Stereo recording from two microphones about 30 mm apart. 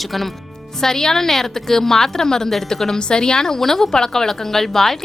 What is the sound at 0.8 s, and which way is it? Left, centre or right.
A woman's voice, centre.